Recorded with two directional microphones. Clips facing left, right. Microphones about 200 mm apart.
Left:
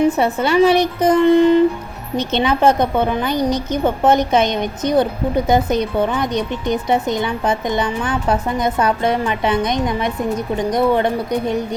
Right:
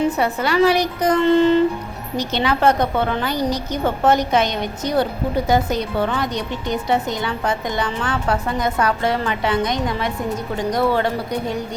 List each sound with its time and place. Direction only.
0.2 s a woman's voice: 25° left (ahead or behind)